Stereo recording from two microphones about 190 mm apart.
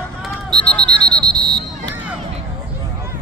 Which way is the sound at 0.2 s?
5° left (ahead or behind).